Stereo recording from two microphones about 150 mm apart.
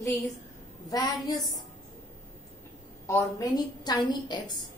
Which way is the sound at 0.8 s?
25° left (ahead or behind).